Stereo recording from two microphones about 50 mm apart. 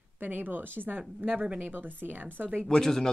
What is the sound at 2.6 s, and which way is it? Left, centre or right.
Speech, centre.